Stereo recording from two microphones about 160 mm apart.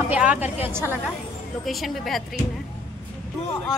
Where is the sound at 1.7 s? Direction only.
Centre (ahead or behind).